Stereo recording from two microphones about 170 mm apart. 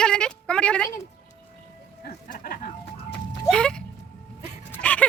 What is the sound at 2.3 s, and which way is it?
Speech, 60° left (ahead or behind).